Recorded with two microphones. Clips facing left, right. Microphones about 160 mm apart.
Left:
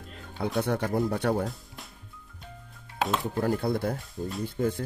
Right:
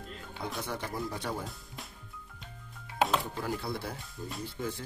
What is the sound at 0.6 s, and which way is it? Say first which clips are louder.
Speech: left 11 dB; 65° left (ahead or behind).